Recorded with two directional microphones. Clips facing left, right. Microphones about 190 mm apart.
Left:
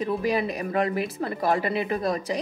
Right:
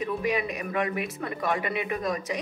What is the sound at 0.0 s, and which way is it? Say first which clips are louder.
Speech: left 3 dB; 35° left (ahead or behind).